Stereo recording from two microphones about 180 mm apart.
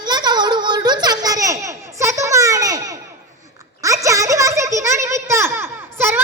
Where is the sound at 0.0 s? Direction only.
25° right (ahead or behind).